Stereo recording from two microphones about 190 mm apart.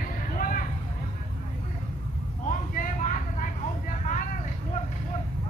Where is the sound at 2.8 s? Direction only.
40° left (ahead or behind).